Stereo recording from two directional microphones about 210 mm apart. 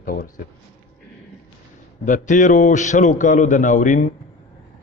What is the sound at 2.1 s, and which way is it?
A man's voice, 40° left (ahead or behind).